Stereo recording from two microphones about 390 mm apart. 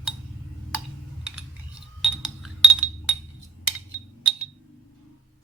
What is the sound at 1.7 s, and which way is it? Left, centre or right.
Chink, centre.